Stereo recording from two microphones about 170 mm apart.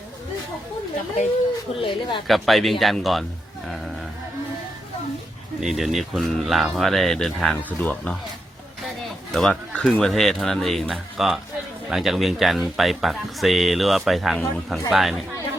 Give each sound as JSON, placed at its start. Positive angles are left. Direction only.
{"t": 1.8, "sound": "speech", "side_deg": 30}
{"t": 2.2, "sound": "speech", "side_deg": 0}
{"t": 5.5, "sound": "speech", "side_deg": 0}
{"t": 9.3, "sound": "speech", "side_deg": 5}